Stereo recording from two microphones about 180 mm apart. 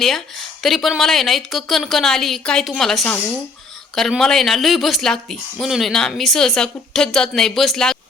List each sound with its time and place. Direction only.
0.6 s speech: centre (ahead or behind)